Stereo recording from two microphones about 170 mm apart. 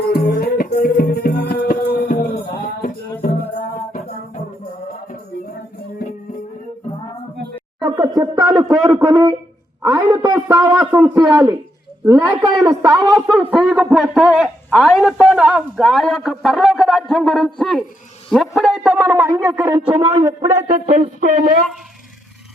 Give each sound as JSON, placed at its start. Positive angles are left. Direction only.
{"t": 0.1, "sound": "music", "side_deg": 70}
{"t": 7.8, "sound": "a sound", "side_deg": -25}
{"t": 9.8, "sound": "a man's voice", "side_deg": -20}
{"t": 13.2, "sound": "a man's voice", "side_deg": 0}
{"t": 19.7, "sound": "a man's voice", "side_deg": -35}
{"t": 20.2, "sound": "a man's voice", "side_deg": -20}
{"t": 20.7, "sound": "speech", "side_deg": -50}